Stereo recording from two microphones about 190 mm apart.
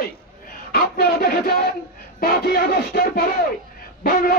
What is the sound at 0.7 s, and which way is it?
Speech, 55° left (ahead or behind).